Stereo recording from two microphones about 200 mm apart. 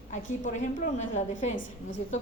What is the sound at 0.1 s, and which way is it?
A woman's voice, 40° left (ahead or behind).